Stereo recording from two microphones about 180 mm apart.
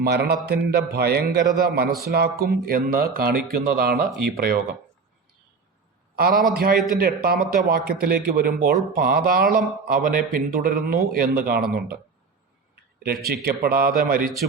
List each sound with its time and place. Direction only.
0.0 s speech: 65° right (ahead or behind)
6.1 s a man's voice: 55° right (ahead or behind)
6.7 s a man's voice: centre (ahead or behind)
7.0 s a man's voice: 55° right (ahead or behind)
12.7 s a sound: 60° right (ahead or behind)
13.2 s speech: 60° right (ahead or behind)